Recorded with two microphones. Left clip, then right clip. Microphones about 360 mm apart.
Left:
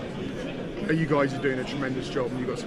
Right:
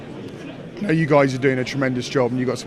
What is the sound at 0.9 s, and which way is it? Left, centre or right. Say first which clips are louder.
Speech: right 8 dB; right.